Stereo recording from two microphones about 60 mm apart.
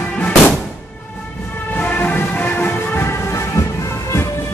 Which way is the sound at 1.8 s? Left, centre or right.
Left.